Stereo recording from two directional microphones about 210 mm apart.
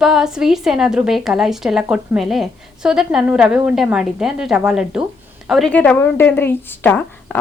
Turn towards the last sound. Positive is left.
turn(degrees=10)  # may be behind; listen again after turning